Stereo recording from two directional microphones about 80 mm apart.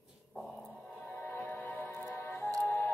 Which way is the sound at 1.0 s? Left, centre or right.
Left.